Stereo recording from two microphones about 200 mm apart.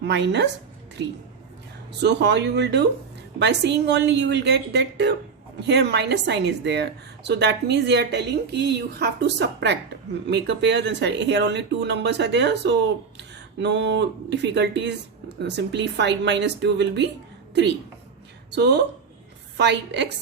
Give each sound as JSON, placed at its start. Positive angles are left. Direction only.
{"t": 0.0, "sound": "a woman's voice", "side_deg": -60}
{"t": 1.9, "sound": "a woman's voice", "side_deg": -60}
{"t": 18.5, "sound": "a woman's voice", "side_deg": -60}